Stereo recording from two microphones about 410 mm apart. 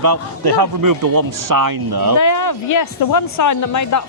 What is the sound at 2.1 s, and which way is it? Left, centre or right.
Speech, left.